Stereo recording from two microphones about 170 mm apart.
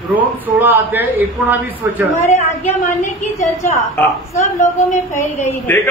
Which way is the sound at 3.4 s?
15° left (ahead or behind).